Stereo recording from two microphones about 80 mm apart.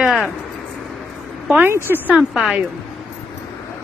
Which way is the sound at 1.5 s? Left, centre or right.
Right.